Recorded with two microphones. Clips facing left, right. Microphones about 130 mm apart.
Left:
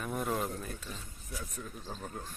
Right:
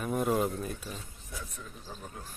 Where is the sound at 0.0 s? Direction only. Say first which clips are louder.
Right 5 dB; 5° right (ahead or behind).